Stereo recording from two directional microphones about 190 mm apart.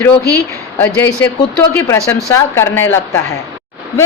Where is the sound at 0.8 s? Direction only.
10° left (ahead or behind).